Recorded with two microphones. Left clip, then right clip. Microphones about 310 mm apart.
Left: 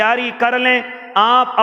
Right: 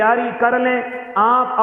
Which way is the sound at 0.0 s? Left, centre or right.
Left.